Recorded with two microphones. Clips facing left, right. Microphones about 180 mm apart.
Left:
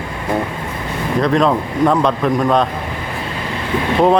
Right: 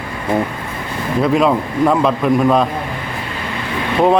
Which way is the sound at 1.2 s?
5° right (ahead or behind).